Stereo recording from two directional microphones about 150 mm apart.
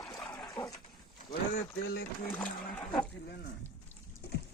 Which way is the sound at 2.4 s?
10° left (ahead or behind).